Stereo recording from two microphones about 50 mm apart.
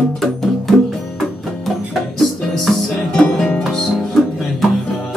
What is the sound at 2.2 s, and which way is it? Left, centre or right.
Music, centre.